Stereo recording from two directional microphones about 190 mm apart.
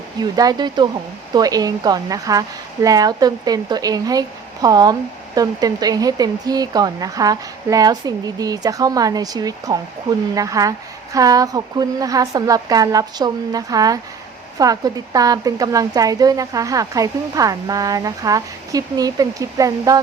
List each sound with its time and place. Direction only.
0.2 s speech: 20° right (ahead or behind)